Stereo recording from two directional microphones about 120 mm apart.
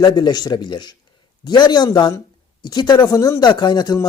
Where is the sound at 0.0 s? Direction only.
35° left (ahead or behind).